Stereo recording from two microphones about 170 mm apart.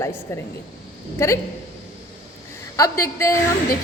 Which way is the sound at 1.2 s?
15° left (ahead or behind).